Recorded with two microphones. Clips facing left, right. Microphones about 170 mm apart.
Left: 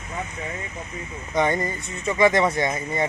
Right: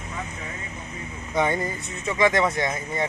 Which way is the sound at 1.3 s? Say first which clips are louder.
Left 1 dB; 5° right (ahead or behind).